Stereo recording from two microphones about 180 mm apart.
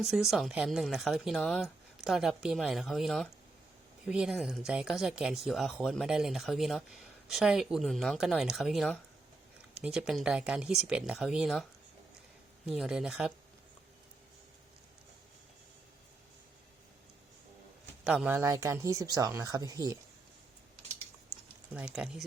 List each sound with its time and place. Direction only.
0.0 s speech: centre (ahead or behind)
12.6 s speech: 5° right (ahead or behind)
18.0 s speech: 5° right (ahead or behind)
21.9 s speech: 5° right (ahead or behind)